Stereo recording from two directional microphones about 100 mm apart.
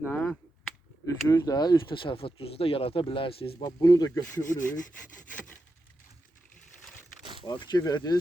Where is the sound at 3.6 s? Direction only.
40° left (ahead or behind).